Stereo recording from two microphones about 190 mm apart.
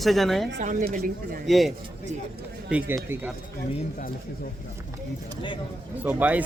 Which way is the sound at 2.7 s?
10° right (ahead or behind).